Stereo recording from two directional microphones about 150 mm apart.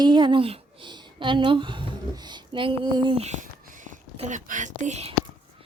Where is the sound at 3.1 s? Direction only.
50° right (ahead or behind).